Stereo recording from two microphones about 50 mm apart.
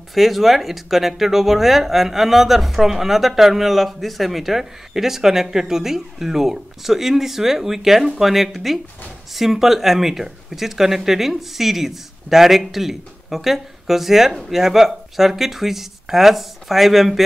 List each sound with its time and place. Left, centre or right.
0.1 s speech: centre